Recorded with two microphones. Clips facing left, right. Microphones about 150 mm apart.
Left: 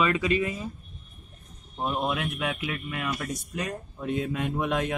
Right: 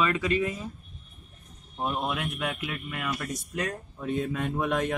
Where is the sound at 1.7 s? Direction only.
5° left (ahead or behind).